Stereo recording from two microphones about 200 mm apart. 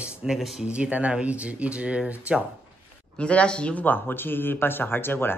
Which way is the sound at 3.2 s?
5° left (ahead or behind).